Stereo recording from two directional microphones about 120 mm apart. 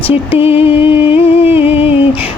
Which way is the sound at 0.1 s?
55° left (ahead or behind).